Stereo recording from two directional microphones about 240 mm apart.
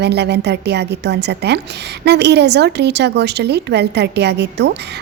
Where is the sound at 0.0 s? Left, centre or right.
Right.